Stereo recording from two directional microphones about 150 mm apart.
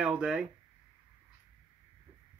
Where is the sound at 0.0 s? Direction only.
5° right (ahead or behind).